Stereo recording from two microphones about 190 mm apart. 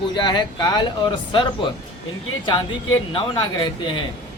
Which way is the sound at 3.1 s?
25° left (ahead or behind).